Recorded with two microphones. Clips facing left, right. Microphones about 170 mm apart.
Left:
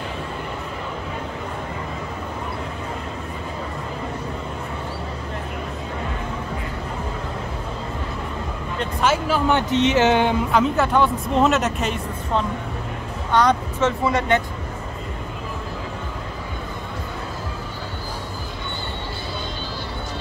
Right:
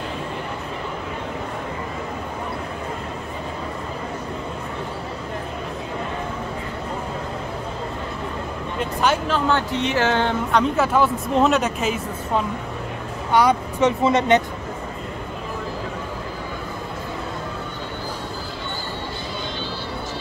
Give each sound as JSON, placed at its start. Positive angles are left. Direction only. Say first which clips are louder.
{"t": 9.0, "sound": "speech", "louder": "left 1 dB", "side_deg": 5}
{"t": 9.5, "sound": "speech", "louder": "left 3 dB", "side_deg": 20}
{"t": 10.5, "sound": "speech", "louder": "right 3 dB", "side_deg": 0}